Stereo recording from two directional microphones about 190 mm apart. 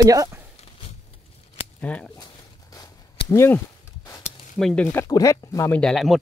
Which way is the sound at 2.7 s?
15° left (ahead or behind).